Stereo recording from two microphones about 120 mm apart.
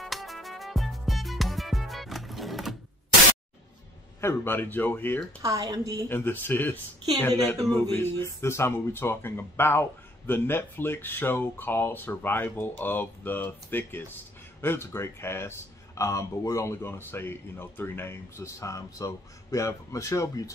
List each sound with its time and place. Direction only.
0.0 s music: centre (ahead or behind)
4.2 s speech: 20° left (ahead or behind)
5.4 s a woman's voice: 30° right (ahead or behind)
6.0 s speech: 15° left (ahead or behind)